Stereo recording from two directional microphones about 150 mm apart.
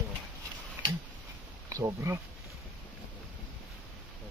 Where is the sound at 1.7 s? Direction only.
20° right (ahead or behind).